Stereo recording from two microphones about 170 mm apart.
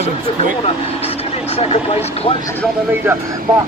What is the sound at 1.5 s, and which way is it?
Speech, 35° left (ahead or behind).